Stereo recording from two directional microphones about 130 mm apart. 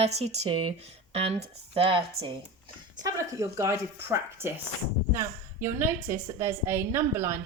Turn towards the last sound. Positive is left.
turn(degrees=-20)  # may be behind; listen again after turning